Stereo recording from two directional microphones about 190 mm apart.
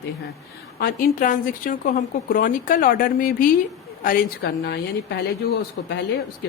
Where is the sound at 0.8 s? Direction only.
50° left (ahead or behind).